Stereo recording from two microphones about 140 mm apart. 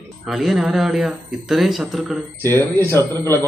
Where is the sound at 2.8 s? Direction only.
15° left (ahead or behind).